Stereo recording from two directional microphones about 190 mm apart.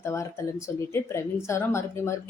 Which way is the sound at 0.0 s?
15° left (ahead or behind).